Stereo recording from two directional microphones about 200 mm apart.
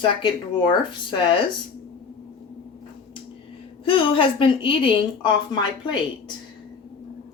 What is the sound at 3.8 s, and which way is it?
Speech, 25° left (ahead or behind).